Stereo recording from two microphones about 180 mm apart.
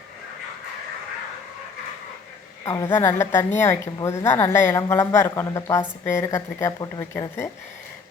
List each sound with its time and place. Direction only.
2.6 s a woman's voice: 15° left (ahead or behind)